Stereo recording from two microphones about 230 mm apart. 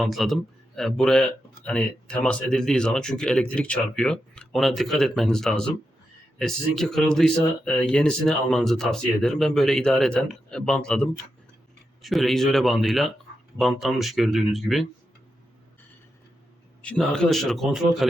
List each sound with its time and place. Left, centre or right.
0.0 s speech: centre
16.8 s speech: centre